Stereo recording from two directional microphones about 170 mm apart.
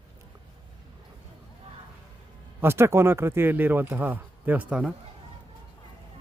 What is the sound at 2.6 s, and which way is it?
Speech, 15° right (ahead or behind).